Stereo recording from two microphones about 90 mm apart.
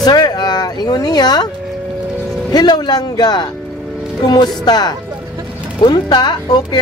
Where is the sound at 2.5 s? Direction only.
50° left (ahead or behind).